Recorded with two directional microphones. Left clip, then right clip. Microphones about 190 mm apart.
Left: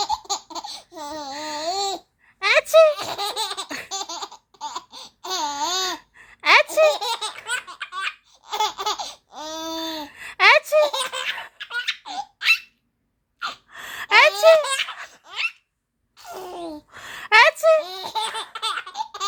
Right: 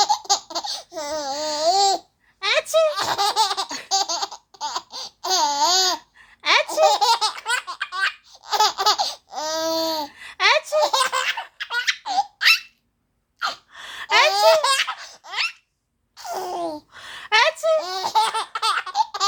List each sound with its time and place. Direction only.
0.0 s laughter: 15° right (ahead or behind)
2.4 s a sound: 40° left (ahead or behind)
3.0 s laughter: 10° right (ahead or behind)
6.1 s baby laughter: 40° left (ahead or behind)
6.9 s laughter: 10° right (ahead or behind)
10.1 s a sound: 40° left (ahead or behind)
10.8 s laughter: 10° right (ahead or behind)
13.7 s gasp: 35° left (ahead or behind)
14.3 s baby laughter: 15° right (ahead or behind)
15.3 s a sound: 15° right (ahead or behind)
16.1 s gasp: 10° right (ahead or behind)
16.9 s a sound: 35° left (ahead or behind)
17.8 s laughter: 15° right (ahead or behind)